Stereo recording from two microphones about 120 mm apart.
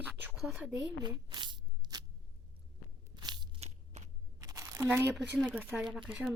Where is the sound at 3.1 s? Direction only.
40° right (ahead or behind).